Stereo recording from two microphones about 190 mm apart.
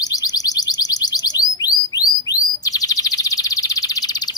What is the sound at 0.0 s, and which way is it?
Bird, 20° left (ahead or behind).